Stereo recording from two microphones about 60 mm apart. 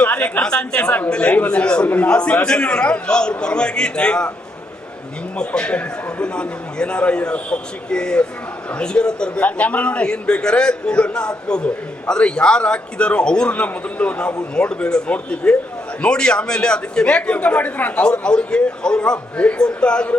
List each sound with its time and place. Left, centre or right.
0.0 s a man's voice: left
5.4 s a man's voice: centre